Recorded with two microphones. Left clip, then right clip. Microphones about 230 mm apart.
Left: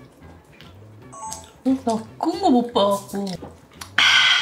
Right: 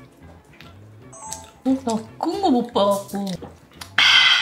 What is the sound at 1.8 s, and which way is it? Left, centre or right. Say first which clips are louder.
A woman's voice: left 1 dB; centre.